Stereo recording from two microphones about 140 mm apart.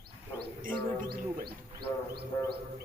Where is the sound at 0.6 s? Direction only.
90° right.